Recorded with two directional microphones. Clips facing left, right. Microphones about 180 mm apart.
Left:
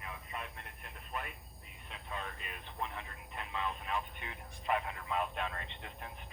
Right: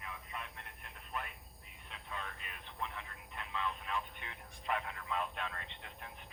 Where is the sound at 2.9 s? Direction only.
15° left (ahead or behind).